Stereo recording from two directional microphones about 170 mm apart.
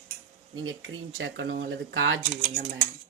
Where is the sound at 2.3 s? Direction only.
45° right (ahead or behind).